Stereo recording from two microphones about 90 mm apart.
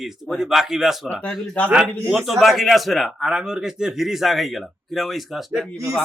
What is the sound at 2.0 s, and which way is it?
A man's voice, centre (ahead or behind).